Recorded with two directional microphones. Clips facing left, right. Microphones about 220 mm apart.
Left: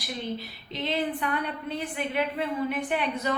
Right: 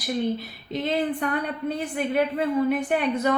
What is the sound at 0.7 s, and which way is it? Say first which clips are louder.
A woman's voice: right 4 dB; 45° right (ahead or behind).